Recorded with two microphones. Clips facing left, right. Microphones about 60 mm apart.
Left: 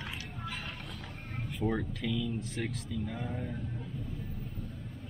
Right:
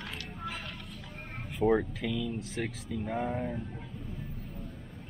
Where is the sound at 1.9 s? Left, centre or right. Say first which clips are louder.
Right 1 dB; centre.